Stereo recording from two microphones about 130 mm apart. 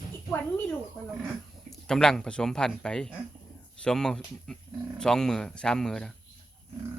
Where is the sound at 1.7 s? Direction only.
5° left (ahead or behind).